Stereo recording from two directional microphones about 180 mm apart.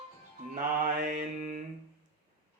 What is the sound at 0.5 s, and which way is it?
Mantra, 60° right (ahead or behind).